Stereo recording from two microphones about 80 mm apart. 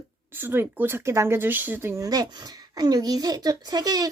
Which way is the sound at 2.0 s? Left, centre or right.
Right.